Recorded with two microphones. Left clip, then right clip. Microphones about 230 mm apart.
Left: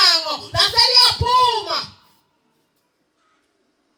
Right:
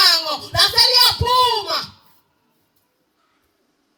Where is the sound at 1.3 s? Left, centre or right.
Right.